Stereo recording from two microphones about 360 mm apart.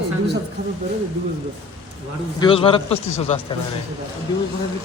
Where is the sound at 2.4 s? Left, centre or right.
Centre.